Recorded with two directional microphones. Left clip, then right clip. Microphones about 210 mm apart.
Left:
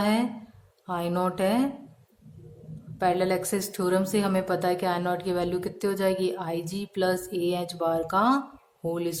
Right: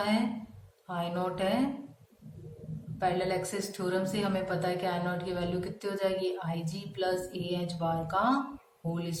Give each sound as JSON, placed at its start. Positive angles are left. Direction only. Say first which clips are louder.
{"t": 0.9, "sound": "a woman's voice", "louder": "left 5 dB", "side_deg": 50}
{"t": 3.0, "sound": "a woman's voice", "louder": "left 5 dB", "side_deg": 50}